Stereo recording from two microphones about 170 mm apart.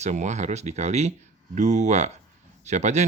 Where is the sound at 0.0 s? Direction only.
45° right (ahead or behind).